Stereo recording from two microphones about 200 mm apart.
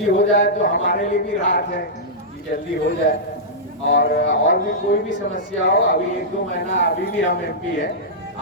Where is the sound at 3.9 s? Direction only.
55° left (ahead or behind).